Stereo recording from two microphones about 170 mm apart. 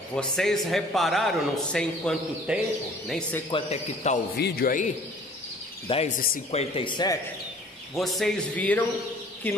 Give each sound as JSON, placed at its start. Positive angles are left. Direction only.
{"t": 0.1, "sound": "a man's voice", "side_deg": 5}
{"t": 3.5, "sound": "speech", "side_deg": 40}
{"t": 4.4, "sound": "a man's voice", "side_deg": 65}
{"t": 5.9, "sound": "speech", "side_deg": 35}
{"t": 7.9, "sound": "a man's voice", "side_deg": 0}